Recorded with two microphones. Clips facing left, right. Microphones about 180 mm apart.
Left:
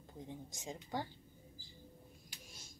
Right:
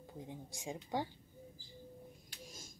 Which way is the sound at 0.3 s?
15° right (ahead or behind).